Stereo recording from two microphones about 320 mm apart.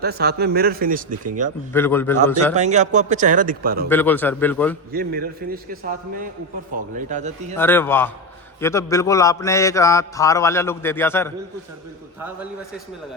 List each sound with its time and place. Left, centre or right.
0.0 s speech: right
1.7 s mantra: centre
2.6 s speech: right
3.8 s a man's voice: centre
4.9 s speech: right
6.9 s speech: right
7.5 s mantra: centre